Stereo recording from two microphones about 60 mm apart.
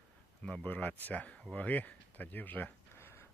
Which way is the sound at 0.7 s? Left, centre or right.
Left.